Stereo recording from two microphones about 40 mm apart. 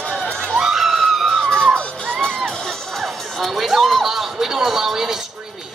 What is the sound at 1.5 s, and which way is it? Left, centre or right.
Crowd, centre.